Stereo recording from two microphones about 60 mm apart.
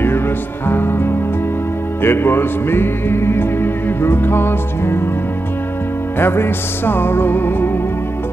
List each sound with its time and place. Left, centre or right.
0.7 s music: left
6.1 s music: left